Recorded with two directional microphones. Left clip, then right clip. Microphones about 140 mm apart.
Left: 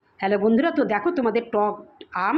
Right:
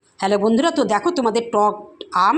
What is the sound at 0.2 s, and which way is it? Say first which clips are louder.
A woman's voice: right 3 dB; 20° right (ahead or behind).